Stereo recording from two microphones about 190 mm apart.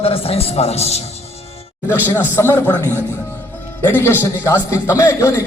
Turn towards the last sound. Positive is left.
turn(degrees=15)  # may be behind; listen again after turning